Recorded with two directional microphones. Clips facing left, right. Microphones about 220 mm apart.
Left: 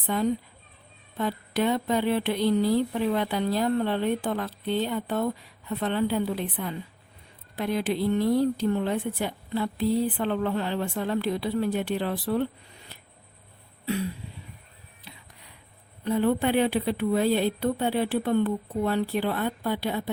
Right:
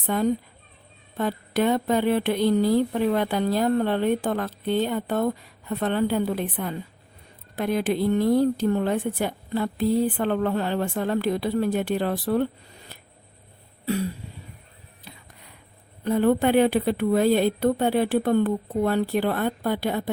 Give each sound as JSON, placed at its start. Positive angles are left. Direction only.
{"t": 0.1, "sound": "speech", "side_deg": -50}
{"t": 13.8, "sound": "throat clearing", "side_deg": -40}
{"t": 15.1, "sound": "a sound", "side_deg": -40}
{"t": 16.0, "sound": "speech", "side_deg": -50}